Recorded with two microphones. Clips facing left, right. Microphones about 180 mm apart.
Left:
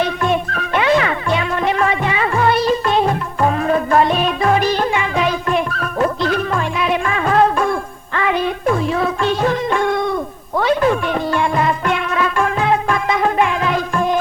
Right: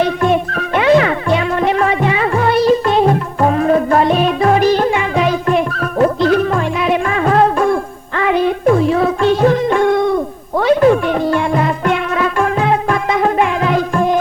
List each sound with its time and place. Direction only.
0.0 s music: 40° right (ahead or behind)